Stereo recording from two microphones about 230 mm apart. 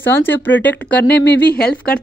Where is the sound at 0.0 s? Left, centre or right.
Centre.